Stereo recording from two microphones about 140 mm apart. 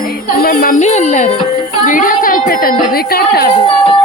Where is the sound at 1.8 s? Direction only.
75° left (ahead or behind); by 3.5 s 90° left.